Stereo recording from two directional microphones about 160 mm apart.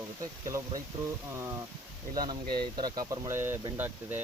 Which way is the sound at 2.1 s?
25° right (ahead or behind).